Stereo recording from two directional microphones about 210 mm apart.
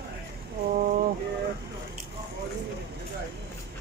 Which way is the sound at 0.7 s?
40° right (ahead or behind).